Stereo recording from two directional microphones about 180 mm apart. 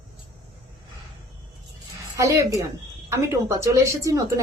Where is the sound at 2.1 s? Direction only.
20° right (ahead or behind).